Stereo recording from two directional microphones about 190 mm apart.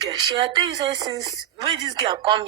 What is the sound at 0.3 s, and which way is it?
A woman's voice, 25° right (ahead or behind).